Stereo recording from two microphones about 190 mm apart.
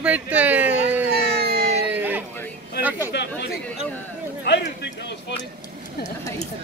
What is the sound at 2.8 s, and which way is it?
Speech, 10° right (ahead or behind).